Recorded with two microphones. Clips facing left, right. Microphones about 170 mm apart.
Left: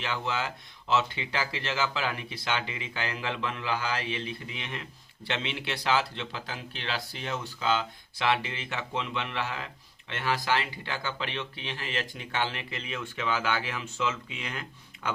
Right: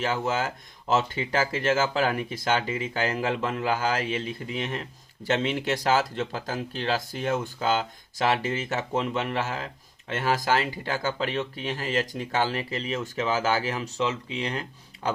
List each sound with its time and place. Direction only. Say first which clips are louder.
0.0 s speech: right 5 dB; 45° right (ahead or behind)